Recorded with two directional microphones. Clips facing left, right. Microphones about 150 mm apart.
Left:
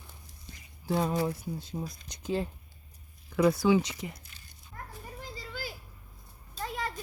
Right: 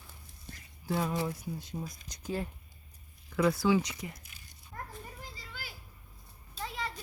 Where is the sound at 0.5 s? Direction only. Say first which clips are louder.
Right 2 dB; 55° right (ahead or behind).